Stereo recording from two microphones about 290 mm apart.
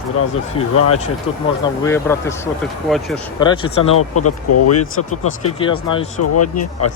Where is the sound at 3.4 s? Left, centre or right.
Centre.